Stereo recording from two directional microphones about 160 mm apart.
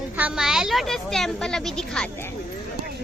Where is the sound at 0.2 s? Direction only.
5° right (ahead or behind).